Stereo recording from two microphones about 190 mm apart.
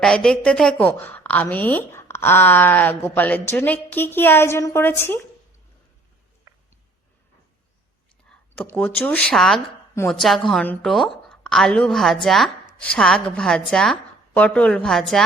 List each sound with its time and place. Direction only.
0.0 s a woman's voice: 5° left (ahead or behind)
6.5 s a sound: 15° right (ahead or behind)
8.3 s a woman's voice: 5° left (ahead or behind)